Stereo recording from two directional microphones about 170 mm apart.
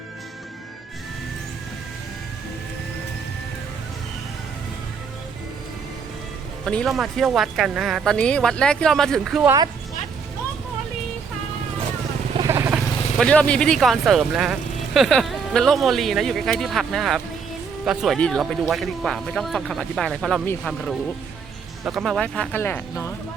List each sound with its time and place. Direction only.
6.7 s speech: centre (ahead or behind)
12.4 s vehicle: 15° right (ahead or behind)
13.1 s speech: 5° left (ahead or behind)